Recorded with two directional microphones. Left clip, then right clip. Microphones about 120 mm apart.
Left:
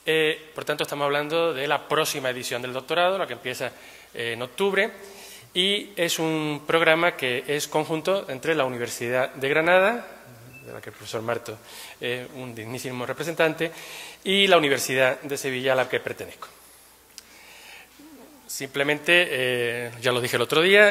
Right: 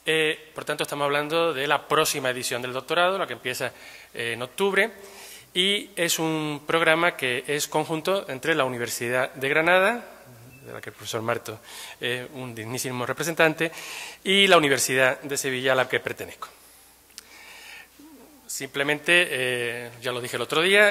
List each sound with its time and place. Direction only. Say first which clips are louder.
0.0 s a sound: left 1 dB; 10° right (ahead or behind)
0.8 s a man's voice: right 1 dB; 20° right (ahead or behind)
1.2 s a man's voice: even; 40° right (ahead or behind)
4.1 s a man's voice: even; 20° right (ahead or behind)
4.6 s a man's voice: right 1 dB; 35° right (ahead or behind)
9.2 s speech: even; 10° right (ahead or behind)
10.7 s a man's voice: right 1 dB; 20° right (ahead or behind)
11.1 s speech: right 1 dB; 30° right (ahead or behind); by 16.4 s 60° right (ahead or behind)
18.5 s a man's voice: left 1 dB; 35° right (ahead or behind); by 19.5 s 20° right (ahead or behind)
19.5 s speech: left 2 dB; centre (ahead or behind)
19.8 s a man's voice: left 6 dB; 20° left (ahead or behind)
20.4 s speech: left 2 dB; centre (ahead or behind)